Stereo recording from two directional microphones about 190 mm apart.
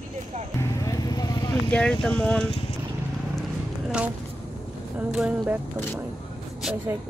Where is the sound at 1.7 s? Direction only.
5° left (ahead or behind).